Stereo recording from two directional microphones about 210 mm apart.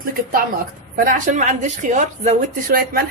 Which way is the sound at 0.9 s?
40° right (ahead or behind).